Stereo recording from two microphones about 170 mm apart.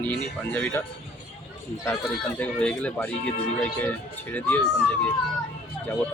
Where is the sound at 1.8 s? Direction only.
10° left (ahead or behind).